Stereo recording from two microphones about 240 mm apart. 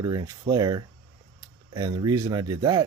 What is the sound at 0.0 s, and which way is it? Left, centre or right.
Speech, centre.